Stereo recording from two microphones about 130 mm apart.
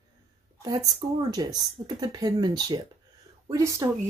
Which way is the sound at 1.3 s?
30° right (ahead or behind).